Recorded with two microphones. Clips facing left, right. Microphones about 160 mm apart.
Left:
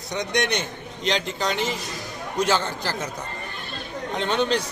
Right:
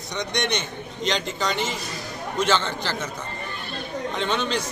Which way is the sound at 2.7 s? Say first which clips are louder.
Even; 10° left (ahead or behind).